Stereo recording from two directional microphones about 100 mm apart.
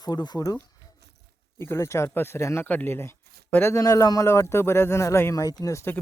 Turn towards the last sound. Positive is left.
turn(degrees=30)  # may be behind; listen again after turning